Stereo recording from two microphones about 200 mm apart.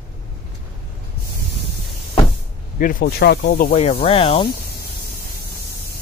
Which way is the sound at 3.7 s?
30° left (ahead or behind).